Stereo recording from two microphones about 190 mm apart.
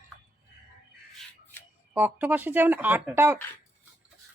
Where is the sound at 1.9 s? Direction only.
10° right (ahead or behind).